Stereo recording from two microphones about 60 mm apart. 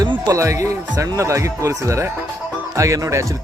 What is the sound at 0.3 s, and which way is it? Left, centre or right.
A man's voice, right.